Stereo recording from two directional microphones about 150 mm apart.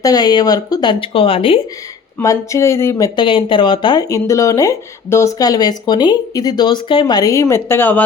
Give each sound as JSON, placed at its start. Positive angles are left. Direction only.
{"t": 0.0, "sound": "speech", "side_deg": 25}
{"t": 2.2, "sound": "speech", "side_deg": 20}
{"t": 3.2, "sound": "speech", "side_deg": 35}